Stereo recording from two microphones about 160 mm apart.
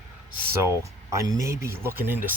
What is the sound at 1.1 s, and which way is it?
Speech, 20° right (ahead or behind).